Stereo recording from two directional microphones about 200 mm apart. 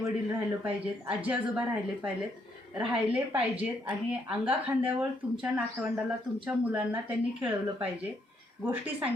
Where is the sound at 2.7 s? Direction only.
5° right (ahead or behind).